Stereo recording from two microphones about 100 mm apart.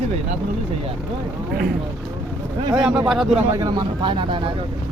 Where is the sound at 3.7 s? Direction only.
50° right (ahead or behind).